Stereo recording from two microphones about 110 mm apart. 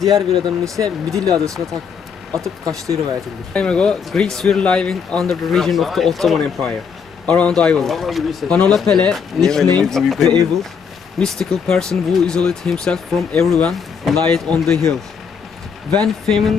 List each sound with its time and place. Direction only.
0.1 s speech: 30° right (ahead or behind)
3.5 s speech: 10° left (ahead or behind)
16.2 s speech: centre (ahead or behind)